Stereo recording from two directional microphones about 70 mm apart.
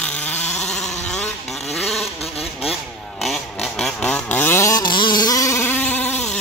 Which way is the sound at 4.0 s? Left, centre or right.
Centre.